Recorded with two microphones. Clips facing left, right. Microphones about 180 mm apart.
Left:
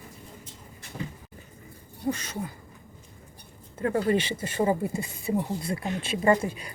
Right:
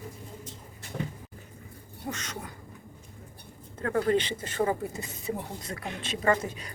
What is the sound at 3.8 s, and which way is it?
Speech, 10° left (ahead or behind).